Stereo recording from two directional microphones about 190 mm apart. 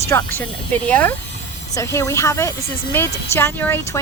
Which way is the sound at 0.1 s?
15° left (ahead or behind).